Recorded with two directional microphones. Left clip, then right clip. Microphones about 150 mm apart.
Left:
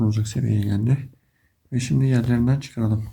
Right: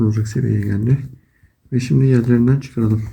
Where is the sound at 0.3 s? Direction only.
30° left (ahead or behind).